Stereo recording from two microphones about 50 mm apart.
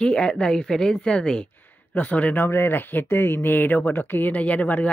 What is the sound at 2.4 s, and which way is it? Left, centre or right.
Speech, left.